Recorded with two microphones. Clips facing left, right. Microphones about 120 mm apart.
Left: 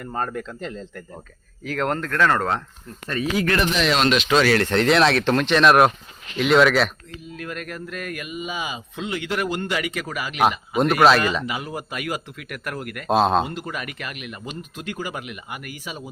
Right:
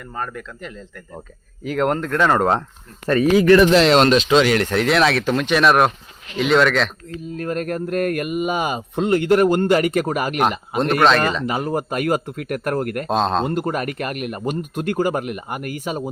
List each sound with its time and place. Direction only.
0.1 s speech: 35° left (ahead or behind)
1.6 s speech: 10° right (ahead or behind)
3.7 s speech: 90° right
4.1 s speech: 35° right (ahead or behind)
4.4 s speech: 20° right (ahead or behind)
4.7 s speech: 5° right (ahead or behind)
7.3 s speech: 40° right (ahead or behind)
10.8 s speech: 5° left (ahead or behind)
11.4 s speech: 45° right (ahead or behind)
13.1 s speech: 5° left (ahead or behind)
13.5 s speech: 50° right (ahead or behind)